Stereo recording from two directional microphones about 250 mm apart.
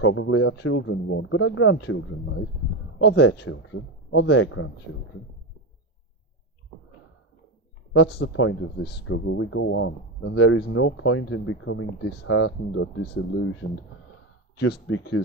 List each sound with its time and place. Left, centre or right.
0.0 s speech: left
7.9 s speech: left
14.6 s speech: left